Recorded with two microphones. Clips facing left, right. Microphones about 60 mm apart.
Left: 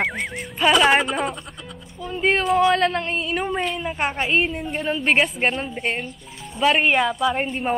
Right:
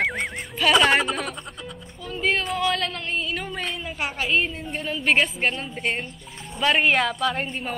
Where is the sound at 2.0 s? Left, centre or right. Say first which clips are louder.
Left 4 dB; left.